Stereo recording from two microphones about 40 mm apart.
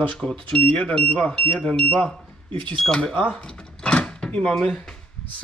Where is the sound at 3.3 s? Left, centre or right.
Centre.